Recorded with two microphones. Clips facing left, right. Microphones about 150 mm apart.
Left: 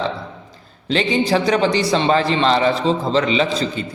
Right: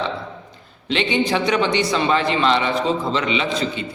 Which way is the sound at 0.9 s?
35° left (ahead or behind).